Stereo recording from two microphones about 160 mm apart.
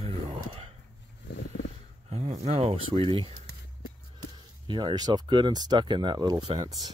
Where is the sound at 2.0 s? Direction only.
45° right (ahead or behind).